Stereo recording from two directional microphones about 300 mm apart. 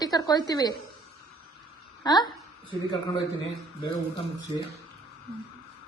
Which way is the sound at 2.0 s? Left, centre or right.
Centre.